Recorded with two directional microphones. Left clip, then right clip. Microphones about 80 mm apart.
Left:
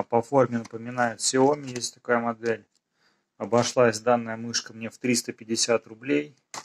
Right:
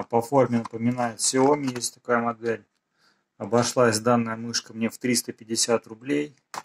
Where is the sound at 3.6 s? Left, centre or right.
Right.